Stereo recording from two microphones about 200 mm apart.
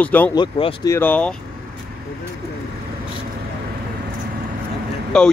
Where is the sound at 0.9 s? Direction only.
10° left (ahead or behind).